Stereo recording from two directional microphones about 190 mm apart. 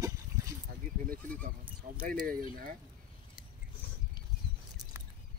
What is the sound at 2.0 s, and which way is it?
Speech, 50° right (ahead or behind).